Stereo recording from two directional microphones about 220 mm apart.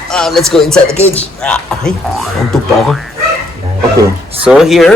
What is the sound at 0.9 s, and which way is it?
Speech, 30° left (ahead or behind).